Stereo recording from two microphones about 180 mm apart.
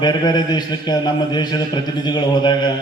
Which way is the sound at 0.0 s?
25° left (ahead or behind).